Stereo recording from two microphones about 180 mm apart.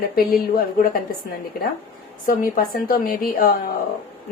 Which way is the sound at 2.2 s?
50° left (ahead or behind).